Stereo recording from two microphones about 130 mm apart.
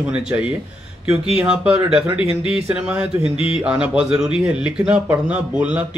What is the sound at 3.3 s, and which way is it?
Speech, 45° left (ahead or behind).